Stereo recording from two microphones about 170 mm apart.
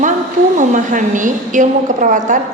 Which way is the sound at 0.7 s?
50° right (ahead or behind).